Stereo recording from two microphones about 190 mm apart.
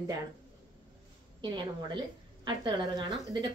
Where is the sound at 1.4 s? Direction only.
25° right (ahead or behind).